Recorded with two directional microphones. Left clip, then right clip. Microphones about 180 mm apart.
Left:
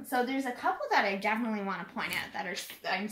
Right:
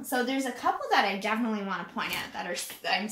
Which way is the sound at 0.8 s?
15° left (ahead or behind).